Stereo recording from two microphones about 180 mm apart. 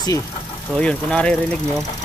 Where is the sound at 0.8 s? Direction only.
5° left (ahead or behind).